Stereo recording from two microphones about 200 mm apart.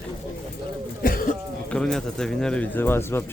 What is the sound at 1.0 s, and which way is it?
Speech, 45° left (ahead or behind).